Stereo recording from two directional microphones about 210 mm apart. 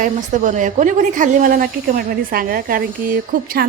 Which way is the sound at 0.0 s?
35° right (ahead or behind).